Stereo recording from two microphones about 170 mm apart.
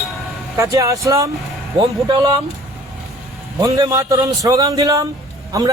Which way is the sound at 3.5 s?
20° right (ahead or behind).